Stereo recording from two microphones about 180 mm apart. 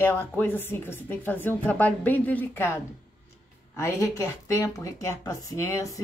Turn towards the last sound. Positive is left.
turn(degrees=15)  # may be behind; listen again after turning